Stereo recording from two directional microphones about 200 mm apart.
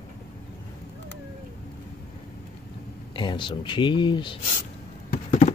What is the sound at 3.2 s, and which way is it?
Speech, 25° left (ahead or behind).